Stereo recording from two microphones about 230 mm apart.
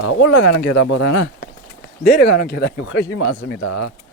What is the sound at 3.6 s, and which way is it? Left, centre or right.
Speech, left.